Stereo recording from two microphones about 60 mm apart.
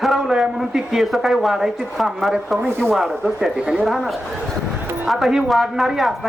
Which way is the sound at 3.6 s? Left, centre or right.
Centre.